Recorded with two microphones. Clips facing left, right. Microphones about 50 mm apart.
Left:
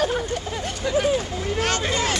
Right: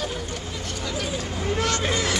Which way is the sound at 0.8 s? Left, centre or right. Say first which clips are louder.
Left 10 dB; left.